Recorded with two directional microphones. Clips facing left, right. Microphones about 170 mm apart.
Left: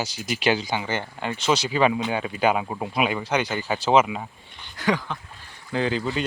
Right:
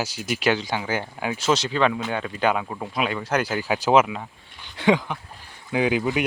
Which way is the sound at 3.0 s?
10° left (ahead or behind).